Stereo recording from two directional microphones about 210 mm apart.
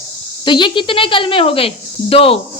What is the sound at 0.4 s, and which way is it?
A woman's voice, 20° left (ahead or behind).